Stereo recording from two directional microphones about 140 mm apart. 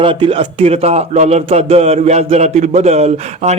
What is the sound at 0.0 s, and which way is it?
Speech, 40° right (ahead or behind).